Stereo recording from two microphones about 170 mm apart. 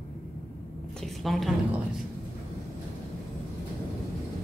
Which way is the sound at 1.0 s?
Centre (ahead or behind).